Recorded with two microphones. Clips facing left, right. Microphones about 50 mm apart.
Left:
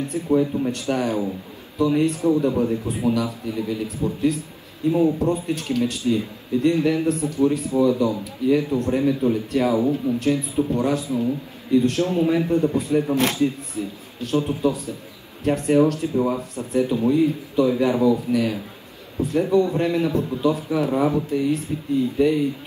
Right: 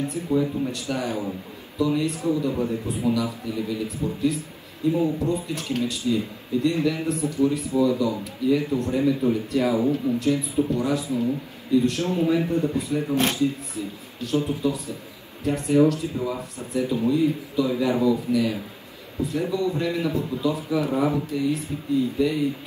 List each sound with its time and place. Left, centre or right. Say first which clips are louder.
0.1 s a man's voice: left 3 dB; left